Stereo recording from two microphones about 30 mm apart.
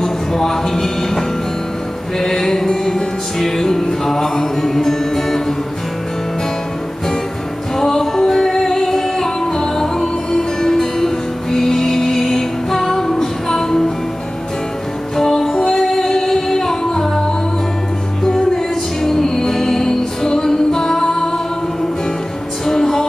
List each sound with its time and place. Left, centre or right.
0.0 s speech: centre
2.1 s music: centre
7.7 s music: centre
15.1 s music: centre
18.2 s music: centre
22.7 s music: centre